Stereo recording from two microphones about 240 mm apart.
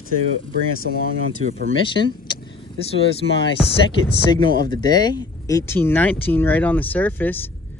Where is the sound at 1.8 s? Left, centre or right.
Centre.